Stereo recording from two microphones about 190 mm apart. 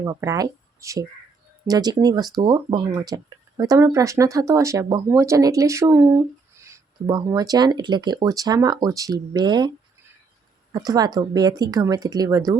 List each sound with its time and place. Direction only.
0.0 s speech: 15° right (ahead or behind)